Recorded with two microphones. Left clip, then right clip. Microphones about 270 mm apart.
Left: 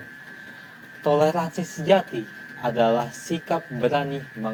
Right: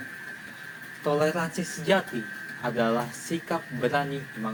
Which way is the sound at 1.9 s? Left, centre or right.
Centre.